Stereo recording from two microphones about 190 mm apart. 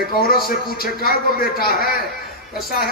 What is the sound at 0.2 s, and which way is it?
A man's voice, 50° left (ahead or behind).